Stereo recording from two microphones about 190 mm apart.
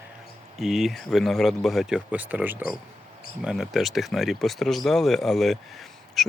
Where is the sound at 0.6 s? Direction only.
Centre (ahead or behind).